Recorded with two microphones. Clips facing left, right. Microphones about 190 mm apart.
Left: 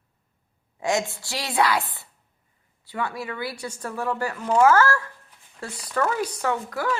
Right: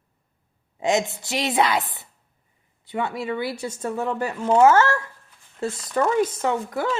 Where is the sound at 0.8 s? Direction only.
20° right (ahead or behind).